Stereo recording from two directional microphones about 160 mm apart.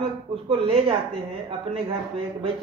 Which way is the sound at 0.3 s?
35° right (ahead or behind).